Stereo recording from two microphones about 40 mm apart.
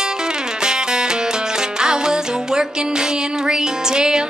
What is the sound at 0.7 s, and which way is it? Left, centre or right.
Music, centre.